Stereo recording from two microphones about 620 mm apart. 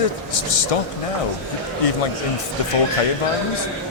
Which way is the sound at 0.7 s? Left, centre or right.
Left.